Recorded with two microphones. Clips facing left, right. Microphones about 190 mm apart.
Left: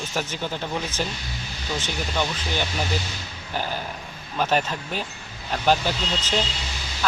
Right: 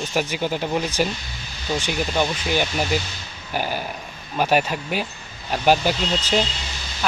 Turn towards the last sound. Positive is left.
turn(degrees=-10)  # may be behind; listen again after turning